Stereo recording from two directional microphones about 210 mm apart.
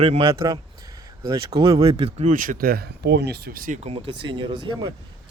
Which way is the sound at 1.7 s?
30° right (ahead or behind).